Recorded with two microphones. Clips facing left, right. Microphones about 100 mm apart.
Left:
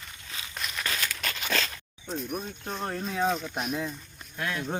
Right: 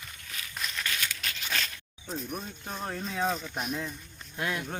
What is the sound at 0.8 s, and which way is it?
Crumpling, 40° left (ahead or behind).